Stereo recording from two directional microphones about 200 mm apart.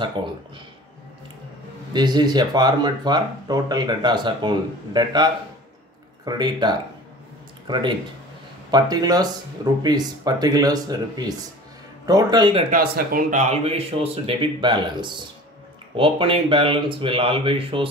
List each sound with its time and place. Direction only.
0.2 s speech: 25° right (ahead or behind)
2.0 s speech: 20° right (ahead or behind)
12.7 s speech: 50° right (ahead or behind); by 17.8 s 25° right (ahead or behind)